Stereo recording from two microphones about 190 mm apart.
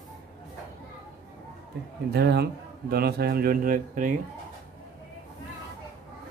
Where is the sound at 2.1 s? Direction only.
60° right (ahead or behind).